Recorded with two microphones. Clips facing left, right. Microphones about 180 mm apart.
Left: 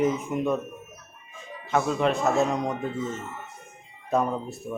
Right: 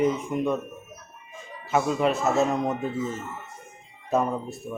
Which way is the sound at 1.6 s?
5° right (ahead or behind).